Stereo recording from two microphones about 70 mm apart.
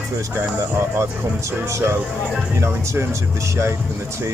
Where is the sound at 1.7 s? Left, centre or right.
Right.